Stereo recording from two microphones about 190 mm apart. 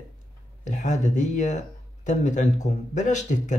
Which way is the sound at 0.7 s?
40° left (ahead or behind).